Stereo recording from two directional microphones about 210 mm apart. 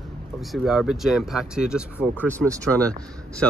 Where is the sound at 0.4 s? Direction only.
Centre (ahead or behind).